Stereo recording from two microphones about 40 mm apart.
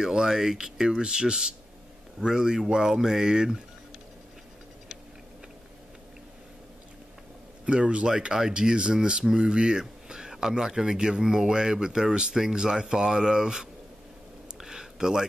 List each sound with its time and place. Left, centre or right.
0.0 s speech: centre
7.6 s speech: right
14.6 s a sound: centre